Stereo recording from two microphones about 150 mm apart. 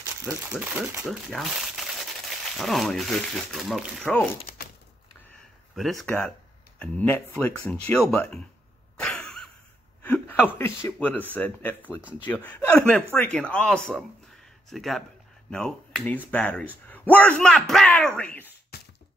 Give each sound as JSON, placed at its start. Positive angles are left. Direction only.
{"t": 0.0, "sound": "crumpling", "side_deg": -20}
{"t": 0.5, "sound": "speech", "side_deg": -10}
{"t": 4.6, "sound": "a sound", "side_deg": 90}
{"t": 5.8, "sound": "speech", "side_deg": 0}
{"t": 9.0, "sound": "a sound", "side_deg": 5}
{"t": 10.0, "sound": "a man's voice", "side_deg": 10}
{"t": 18.7, "sound": "beatboxing", "side_deg": 90}